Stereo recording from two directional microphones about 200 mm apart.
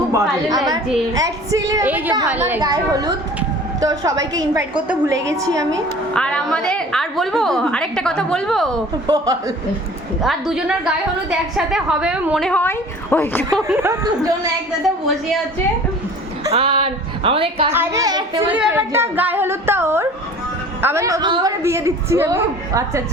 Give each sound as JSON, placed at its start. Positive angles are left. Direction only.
{"t": 0.1, "sound": "speech", "side_deg": -15}
{"t": 6.1, "sound": "a woman's voice", "side_deg": 5}
{"t": 9.0, "sound": "a woman's voice", "side_deg": -20}
{"t": 10.2, "sound": "a woman's voice", "side_deg": -5}
{"t": 13.7, "sound": "speech", "side_deg": -10}
{"t": 16.5, "sound": "a woman's voice", "side_deg": -30}
{"t": 17.7, "sound": "speech", "side_deg": -15}